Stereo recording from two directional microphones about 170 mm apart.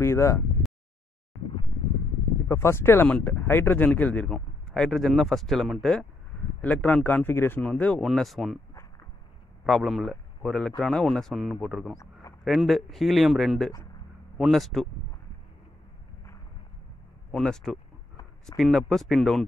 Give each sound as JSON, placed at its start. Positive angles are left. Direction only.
{"t": 0.0, "sound": "speech", "side_deg": 15}
{"t": 2.4, "sound": "speech", "side_deg": 15}
{"t": 9.7, "sound": "a man's voice", "side_deg": 0}
{"t": 12.0, "sound": "a sound", "side_deg": 20}
{"t": 12.4, "sound": "a man's voice", "side_deg": 0}
{"t": 17.3, "sound": "a man's voice", "side_deg": 5}